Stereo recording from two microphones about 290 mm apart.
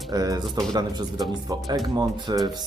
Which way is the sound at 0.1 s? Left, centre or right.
Centre.